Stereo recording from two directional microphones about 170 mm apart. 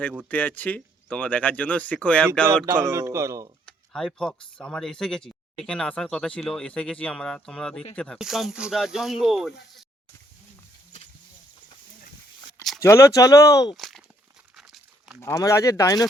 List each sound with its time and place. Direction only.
0.3 s speech: 10° left (ahead or behind)
2.6 s speech: 15° right (ahead or behind)
3.7 s speech: 5° left (ahead or behind)
12.8 s speech: 15° left (ahead or behind)
13.7 s a sound: centre (ahead or behind)
14.5 s crumpling: centre (ahead or behind)
15.2 s speech: 20° left (ahead or behind)